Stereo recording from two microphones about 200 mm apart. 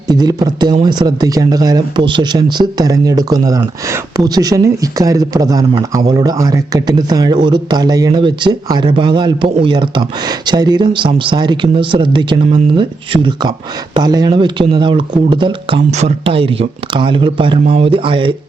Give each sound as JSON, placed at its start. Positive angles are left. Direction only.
{"t": 0.1, "sound": "speech", "side_deg": -20}